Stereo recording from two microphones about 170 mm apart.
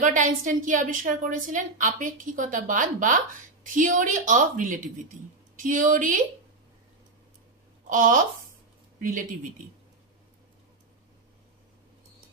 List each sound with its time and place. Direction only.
0.0 s a woman's voice: 50° right (ahead or behind)
7.9 s a woman's voice: 55° right (ahead or behind)